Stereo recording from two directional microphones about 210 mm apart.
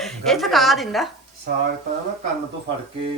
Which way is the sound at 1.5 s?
45° right (ahead or behind).